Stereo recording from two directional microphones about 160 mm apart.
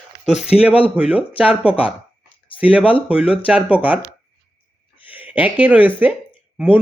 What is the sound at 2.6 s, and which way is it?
Speech, 10° right (ahead or behind).